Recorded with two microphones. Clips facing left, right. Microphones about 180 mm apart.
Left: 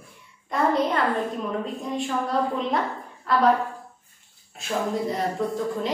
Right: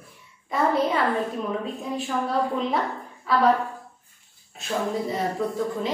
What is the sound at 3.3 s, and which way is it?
Speech, centre (ahead or behind).